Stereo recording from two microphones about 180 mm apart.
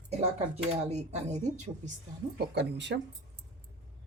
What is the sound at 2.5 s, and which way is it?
Speech, 70° right (ahead or behind).